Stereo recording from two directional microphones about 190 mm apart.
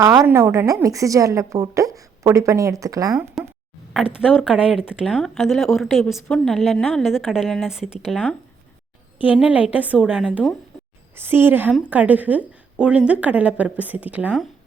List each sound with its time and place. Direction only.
0.2 s a woman's voice: 10° right (ahead or behind)
3.4 s a sound: centre (ahead or behind)
3.9 s a woman's voice: 5° right (ahead or behind)